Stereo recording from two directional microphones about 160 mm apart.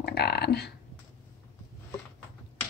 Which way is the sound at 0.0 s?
90° left.